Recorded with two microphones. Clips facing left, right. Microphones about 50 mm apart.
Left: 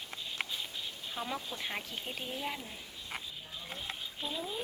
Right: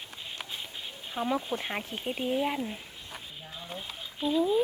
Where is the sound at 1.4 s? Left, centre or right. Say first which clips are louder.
Right 9 dB; right.